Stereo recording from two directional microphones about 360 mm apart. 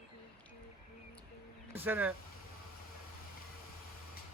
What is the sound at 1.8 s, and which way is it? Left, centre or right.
Speech, centre.